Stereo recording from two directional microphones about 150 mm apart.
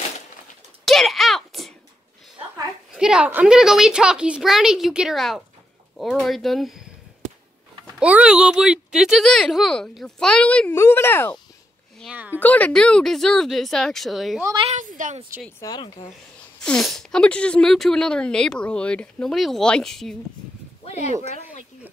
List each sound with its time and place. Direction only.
0.8 s a sound: centre (ahead or behind)
2.9 s speech: 5° right (ahead or behind)
8.0 s speech: 10° right (ahead or behind); by 11.3 s 15° left (ahead or behind)
12.1 s speech: 10° right (ahead or behind)
12.4 s speech: 10° left (ahead or behind)
14.7 s a woman's voice: 60° right (ahead or behind)
15.6 s speech: 25° left (ahead or behind)
16.6 s speech: 5° left (ahead or behind)
20.8 s a sound: 50° left (ahead or behind)
21.3 s speech: 55° left (ahead or behind)